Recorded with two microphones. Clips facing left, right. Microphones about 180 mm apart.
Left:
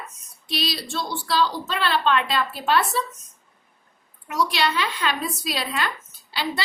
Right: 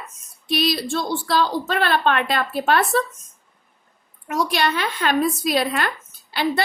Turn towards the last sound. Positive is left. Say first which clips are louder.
# right 6 dB
turn(degrees=-50)  # may be behind; listen again after turning